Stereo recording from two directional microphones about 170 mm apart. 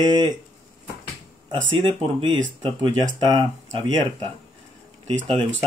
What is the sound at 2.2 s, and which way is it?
Speech, 30° right (ahead or behind).